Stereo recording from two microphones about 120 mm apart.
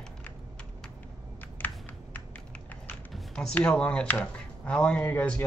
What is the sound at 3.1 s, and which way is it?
Speech, 5° left (ahead or behind).